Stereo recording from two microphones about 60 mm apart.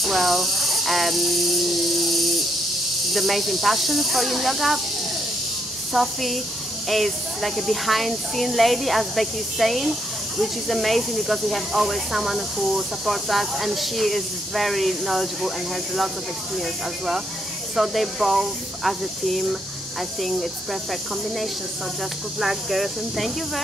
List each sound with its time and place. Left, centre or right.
0.0 s snake: centre
3.1 s speech: centre
5.9 s speech: centre
22.4 s speech: centre